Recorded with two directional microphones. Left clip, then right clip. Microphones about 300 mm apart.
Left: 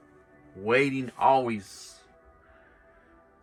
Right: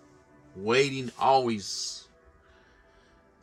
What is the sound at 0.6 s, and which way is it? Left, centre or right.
Speech, centre.